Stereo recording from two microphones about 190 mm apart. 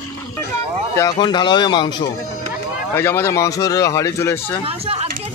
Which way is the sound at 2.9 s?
10° left (ahead or behind).